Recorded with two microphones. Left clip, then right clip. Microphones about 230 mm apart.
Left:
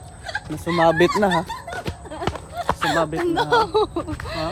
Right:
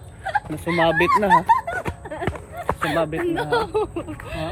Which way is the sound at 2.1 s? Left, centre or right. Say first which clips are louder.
Left 4 dB; centre.